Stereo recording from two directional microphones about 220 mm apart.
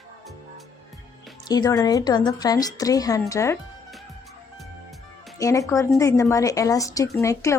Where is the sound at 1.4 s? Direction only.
20° left (ahead or behind).